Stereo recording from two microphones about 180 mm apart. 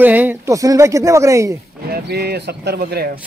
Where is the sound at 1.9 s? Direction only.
60° right (ahead or behind).